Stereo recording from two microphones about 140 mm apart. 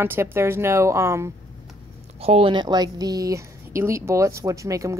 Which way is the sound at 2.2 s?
45° right (ahead or behind).